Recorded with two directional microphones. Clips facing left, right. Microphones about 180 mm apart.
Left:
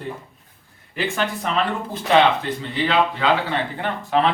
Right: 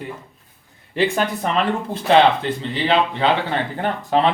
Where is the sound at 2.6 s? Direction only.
30° right (ahead or behind).